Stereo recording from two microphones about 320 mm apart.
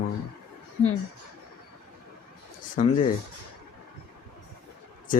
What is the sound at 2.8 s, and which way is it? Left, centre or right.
Speech, left.